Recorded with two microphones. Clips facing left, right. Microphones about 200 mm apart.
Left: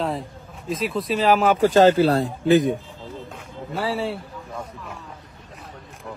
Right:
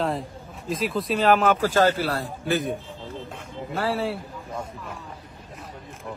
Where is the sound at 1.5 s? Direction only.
15° left (ahead or behind).